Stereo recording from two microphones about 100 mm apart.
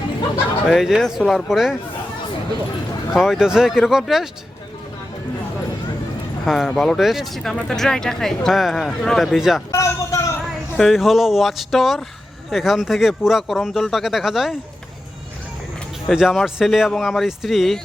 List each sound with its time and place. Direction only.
0.7 s speech: 5° right (ahead or behind)
3.1 s speech: 5° right (ahead or behind)
6.4 s speech: centre (ahead or behind)
9.7 s a sound: 30° left (ahead or behind)
10.8 s speech: centre (ahead or behind)
16.0 s speech: centre (ahead or behind)